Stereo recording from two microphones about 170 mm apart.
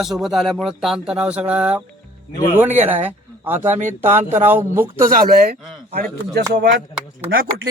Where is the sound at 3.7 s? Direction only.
45° right (ahead or behind).